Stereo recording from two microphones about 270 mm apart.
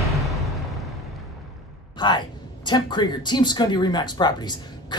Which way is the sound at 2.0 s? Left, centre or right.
Centre.